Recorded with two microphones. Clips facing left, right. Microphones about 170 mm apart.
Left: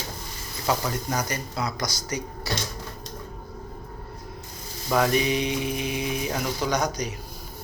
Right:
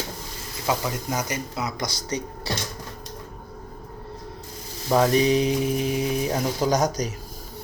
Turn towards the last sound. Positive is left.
turn(degrees=-40)  # may be behind; listen again after turning